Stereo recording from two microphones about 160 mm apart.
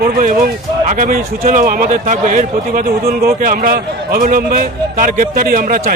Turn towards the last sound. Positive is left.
turn(degrees=-65)  # may be behind; listen again after turning